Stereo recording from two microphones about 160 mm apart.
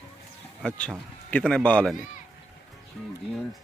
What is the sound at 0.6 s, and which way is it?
Speech, 5° left (ahead or behind).